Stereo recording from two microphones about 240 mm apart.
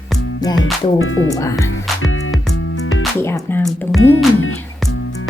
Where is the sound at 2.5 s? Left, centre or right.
Left.